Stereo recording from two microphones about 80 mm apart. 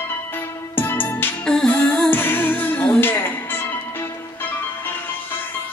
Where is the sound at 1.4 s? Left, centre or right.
Centre.